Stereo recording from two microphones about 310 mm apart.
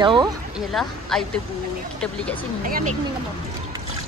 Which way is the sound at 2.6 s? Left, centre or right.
Right.